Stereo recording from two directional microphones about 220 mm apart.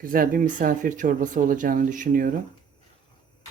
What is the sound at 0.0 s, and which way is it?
Speech, 40° right (ahead or behind).